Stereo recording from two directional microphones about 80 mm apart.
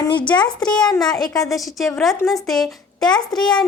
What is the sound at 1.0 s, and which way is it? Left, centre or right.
Speech, left.